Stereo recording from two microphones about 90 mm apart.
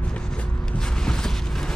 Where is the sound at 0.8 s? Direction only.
10° left (ahead or behind).